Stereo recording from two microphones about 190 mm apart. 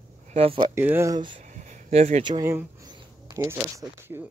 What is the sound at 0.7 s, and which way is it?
Speech, 10° right (ahead or behind).